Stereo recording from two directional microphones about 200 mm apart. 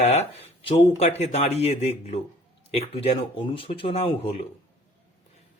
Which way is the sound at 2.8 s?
30° left (ahead or behind).